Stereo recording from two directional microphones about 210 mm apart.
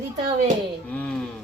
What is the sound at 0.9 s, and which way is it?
Speech, 5° left (ahead or behind).